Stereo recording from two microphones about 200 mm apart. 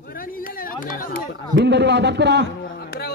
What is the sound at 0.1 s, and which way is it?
Chatter, 45° left (ahead or behind).